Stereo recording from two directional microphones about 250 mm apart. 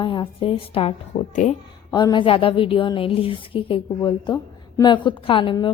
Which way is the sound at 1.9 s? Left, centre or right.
Centre.